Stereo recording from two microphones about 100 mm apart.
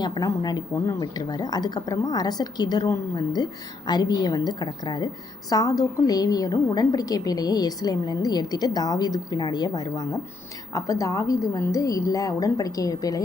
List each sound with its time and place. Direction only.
0.0 s a woman's voice: 45° left (ahead or behind)